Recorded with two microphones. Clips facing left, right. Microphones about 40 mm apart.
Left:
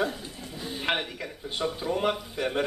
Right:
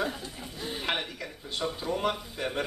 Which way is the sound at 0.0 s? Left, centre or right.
Centre.